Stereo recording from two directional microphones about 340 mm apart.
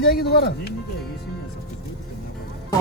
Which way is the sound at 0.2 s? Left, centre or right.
Left.